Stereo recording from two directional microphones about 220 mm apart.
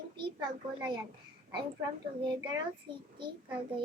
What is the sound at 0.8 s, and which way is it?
Speech, 20° right (ahead or behind).